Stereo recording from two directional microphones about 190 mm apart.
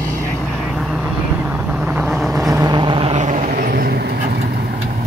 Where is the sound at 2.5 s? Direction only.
20° right (ahead or behind).